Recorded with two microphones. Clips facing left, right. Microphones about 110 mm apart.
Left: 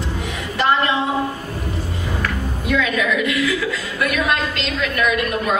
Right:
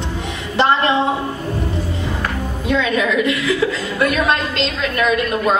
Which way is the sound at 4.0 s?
30° right (ahead or behind).